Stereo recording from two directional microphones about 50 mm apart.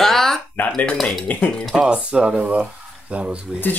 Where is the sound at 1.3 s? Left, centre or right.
Left.